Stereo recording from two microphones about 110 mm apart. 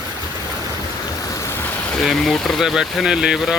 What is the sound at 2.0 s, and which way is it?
Speech, centre (ahead or behind).